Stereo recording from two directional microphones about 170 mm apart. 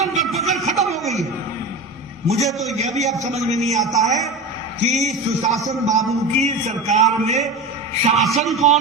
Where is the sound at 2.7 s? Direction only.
40° right (ahead or behind).